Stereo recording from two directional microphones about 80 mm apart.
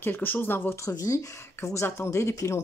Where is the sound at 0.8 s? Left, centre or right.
Left.